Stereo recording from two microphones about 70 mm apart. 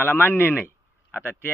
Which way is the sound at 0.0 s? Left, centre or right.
Left.